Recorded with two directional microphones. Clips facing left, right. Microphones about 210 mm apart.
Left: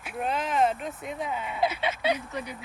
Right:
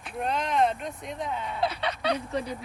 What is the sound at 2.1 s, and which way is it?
Speech, 30° right (ahead or behind).